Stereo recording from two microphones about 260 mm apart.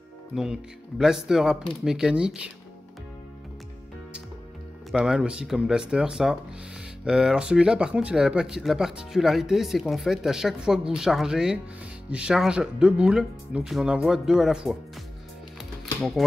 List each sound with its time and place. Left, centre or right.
0.3 s speech: centre
4.9 s speech: centre
15.8 s music: centre